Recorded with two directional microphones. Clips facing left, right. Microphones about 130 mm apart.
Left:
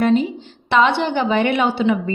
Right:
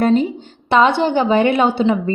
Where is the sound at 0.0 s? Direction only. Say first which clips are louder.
Right 2 dB; 40° right (ahead or behind).